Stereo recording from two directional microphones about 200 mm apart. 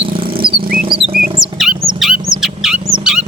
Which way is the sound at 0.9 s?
30° right (ahead or behind).